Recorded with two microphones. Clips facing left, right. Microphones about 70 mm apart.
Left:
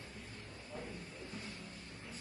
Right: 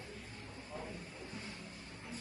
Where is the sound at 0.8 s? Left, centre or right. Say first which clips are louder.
Even; centre.